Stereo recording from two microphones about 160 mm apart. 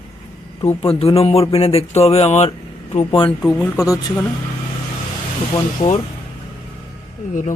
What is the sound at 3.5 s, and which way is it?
Speech, 5° left (ahead or behind).